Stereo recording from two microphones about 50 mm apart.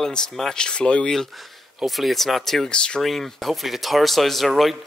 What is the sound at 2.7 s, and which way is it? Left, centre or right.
Speech, centre.